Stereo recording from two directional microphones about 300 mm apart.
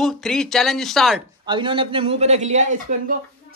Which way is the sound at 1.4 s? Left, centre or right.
Centre.